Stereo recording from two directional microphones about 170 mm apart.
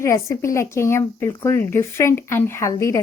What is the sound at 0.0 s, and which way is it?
A woman's voice, 15° left (ahead or behind).